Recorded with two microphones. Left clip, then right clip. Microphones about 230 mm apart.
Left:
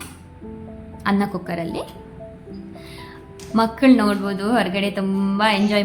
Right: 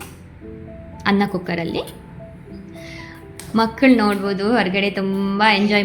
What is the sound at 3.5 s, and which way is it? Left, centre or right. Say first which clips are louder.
A woman's voice: right 1 dB; centre.